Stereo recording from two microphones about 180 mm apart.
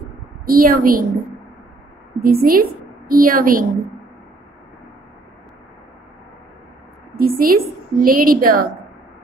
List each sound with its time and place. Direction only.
0.5 s a woman's voice: 55° right (ahead or behind)
2.1 s a woman's voice: 55° right (ahead or behind)
7.2 s a woman's voice: 55° right (ahead or behind)